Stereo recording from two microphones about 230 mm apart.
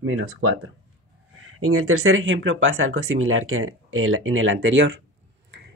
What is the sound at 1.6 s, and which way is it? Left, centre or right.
Speech, right.